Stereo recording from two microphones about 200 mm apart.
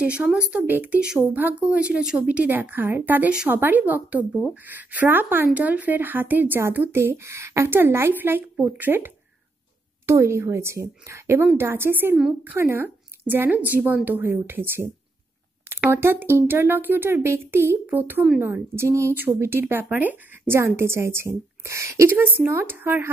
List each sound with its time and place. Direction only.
0.0 s speech: 5° right (ahead or behind)